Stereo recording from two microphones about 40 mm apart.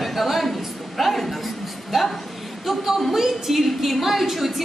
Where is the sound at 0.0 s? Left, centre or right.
Centre.